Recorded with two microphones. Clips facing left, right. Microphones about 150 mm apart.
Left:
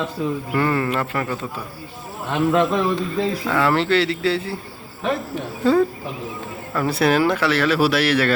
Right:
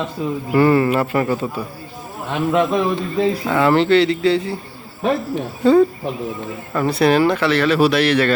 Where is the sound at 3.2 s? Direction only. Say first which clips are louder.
Right 6 dB; 20° right (ahead or behind).